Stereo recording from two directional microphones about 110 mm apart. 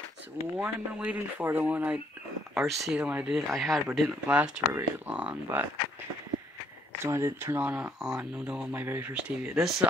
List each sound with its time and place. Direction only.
0.6 s speech: 10° right (ahead or behind)
2.5 s speech: 5° right (ahead or behind)
3.3 s speech: centre (ahead or behind)
4.3 s speech: 10° right (ahead or behind)
7.0 s speech: 25° right (ahead or behind)
9.1 s speech: 5° right (ahead or behind)